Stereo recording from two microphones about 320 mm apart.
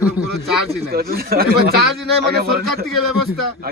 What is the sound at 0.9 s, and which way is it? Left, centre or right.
Speech, right.